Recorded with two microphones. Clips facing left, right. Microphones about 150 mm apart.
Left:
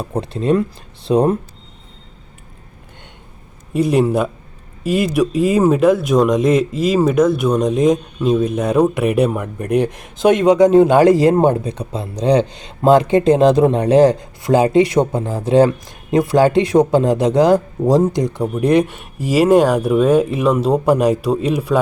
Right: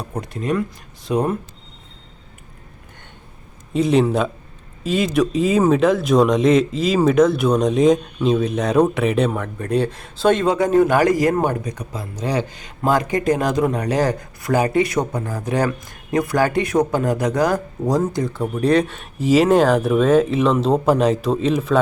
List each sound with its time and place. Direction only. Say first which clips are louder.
0.0 s speech: left 6 dB; 30° left (ahead or behind)
3.7 s speech: left 1 dB; 5° left (ahead or behind)